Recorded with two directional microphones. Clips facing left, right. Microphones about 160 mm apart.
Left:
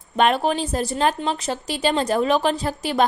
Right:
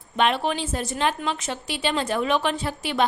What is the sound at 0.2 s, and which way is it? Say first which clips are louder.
A woman's voice: left 4 dB; 40° left (ahead or behind).